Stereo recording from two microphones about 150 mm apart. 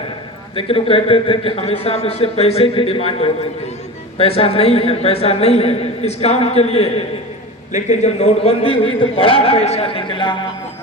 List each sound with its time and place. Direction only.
0.5 s a woman's voice: 35° left (ahead or behind)